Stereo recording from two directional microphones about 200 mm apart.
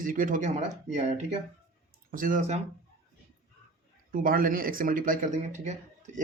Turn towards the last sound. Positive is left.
turn(degrees=-35)  # may be behind; listen again after turning